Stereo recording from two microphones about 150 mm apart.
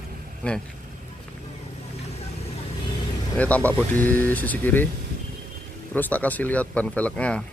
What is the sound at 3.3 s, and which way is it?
Speech, 10° left (ahead or behind).